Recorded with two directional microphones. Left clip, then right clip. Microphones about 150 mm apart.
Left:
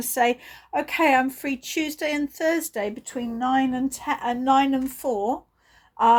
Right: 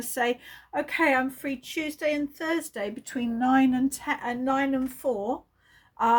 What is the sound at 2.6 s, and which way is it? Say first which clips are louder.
Speech: left 4 dB; 45° left (ahead or behind).